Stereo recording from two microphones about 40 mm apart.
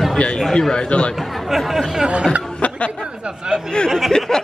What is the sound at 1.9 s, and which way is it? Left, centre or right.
Speech, centre.